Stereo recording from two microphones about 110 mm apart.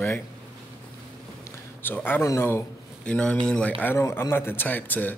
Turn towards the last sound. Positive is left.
turn(degrees=15)  # may be behind; listen again after turning